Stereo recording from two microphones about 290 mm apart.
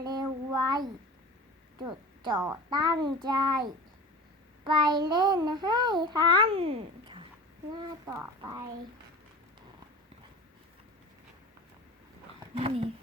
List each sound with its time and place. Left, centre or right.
0.0 s child singing: centre
1.8 s a child's voice: centre
12.5 s speech: centre